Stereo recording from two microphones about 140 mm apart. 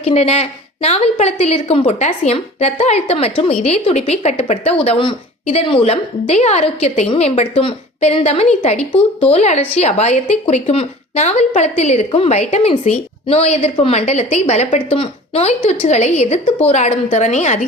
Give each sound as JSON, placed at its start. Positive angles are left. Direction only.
{"t": 0.0, "sound": "a woman's voice", "side_deg": 45}
{"t": 14.1, "sound": "a woman's voice", "side_deg": 50}